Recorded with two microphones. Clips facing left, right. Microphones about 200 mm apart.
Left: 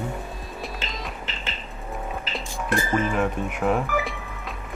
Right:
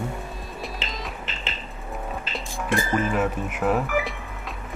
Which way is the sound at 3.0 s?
5° right (ahead or behind).